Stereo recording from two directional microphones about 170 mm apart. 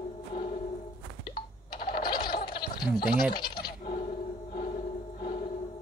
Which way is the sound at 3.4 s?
25° left (ahead or behind).